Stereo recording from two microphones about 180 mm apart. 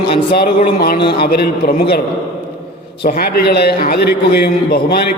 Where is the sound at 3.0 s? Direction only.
60° left (ahead or behind).